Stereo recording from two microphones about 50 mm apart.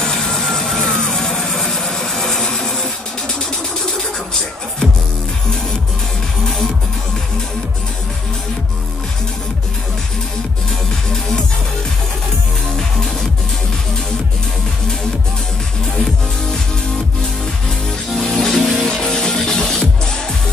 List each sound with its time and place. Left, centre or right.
0.0 s music: centre
1.1 s vehicle: centre
12.7 s music: centre
18.1 s music: centre